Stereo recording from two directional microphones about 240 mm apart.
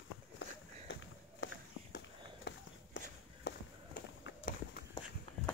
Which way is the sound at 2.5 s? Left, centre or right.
Left.